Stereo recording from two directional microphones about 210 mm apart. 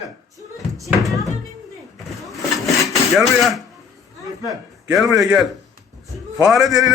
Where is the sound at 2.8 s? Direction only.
Centre (ahead or behind).